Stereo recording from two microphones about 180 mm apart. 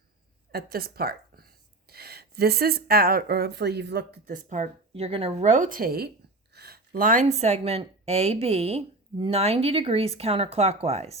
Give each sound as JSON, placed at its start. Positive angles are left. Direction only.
{"t": 0.5, "sound": "a woman's voice", "side_deg": -60}
{"t": 4.3, "sound": "speech", "side_deg": -45}